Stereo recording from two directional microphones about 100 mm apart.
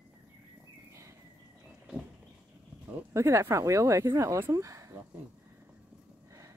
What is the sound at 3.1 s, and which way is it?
Speech, 30° right (ahead or behind).